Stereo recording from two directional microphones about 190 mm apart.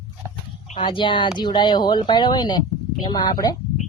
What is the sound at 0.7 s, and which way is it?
Speech, 25° left (ahead or behind).